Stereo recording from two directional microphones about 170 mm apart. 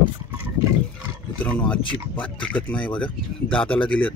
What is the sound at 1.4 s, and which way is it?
Speech, 10° left (ahead or behind).